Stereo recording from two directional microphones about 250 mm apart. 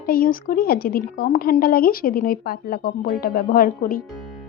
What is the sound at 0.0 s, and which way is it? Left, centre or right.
A woman's voice, left.